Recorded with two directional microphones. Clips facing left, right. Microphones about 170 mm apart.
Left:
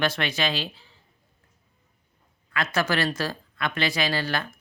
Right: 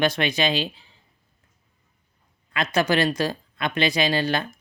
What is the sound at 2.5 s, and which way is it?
Speech, 20° right (ahead or behind).